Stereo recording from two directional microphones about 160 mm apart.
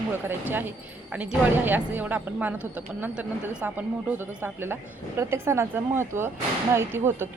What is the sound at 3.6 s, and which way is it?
Speech, 10° right (ahead or behind).